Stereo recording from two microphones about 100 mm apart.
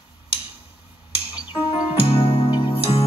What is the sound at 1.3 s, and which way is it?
Music, 55° left (ahead or behind).